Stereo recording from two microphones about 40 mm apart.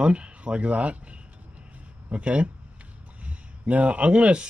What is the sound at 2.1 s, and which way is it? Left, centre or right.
Speech, right.